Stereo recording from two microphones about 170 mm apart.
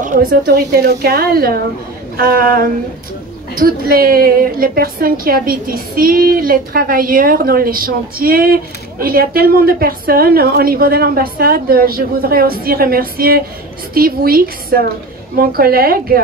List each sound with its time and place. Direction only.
0.0 s a woman's voice: 55° right (ahead or behind)